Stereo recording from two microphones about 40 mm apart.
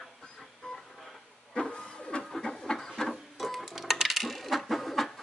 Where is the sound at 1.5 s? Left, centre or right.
Centre.